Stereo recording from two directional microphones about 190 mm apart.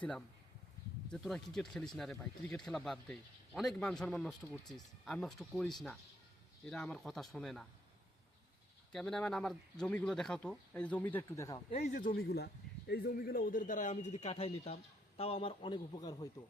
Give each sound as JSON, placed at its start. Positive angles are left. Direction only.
{"t": 1.1, "sound": "speech", "side_deg": 0}
{"t": 8.9, "sound": "speech", "side_deg": 5}
{"t": 11.9, "sound": "a man's voice", "side_deg": 50}